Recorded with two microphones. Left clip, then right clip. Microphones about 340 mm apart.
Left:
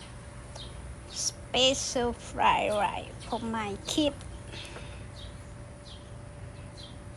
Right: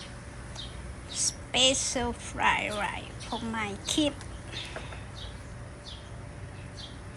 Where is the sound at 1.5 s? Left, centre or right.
Centre.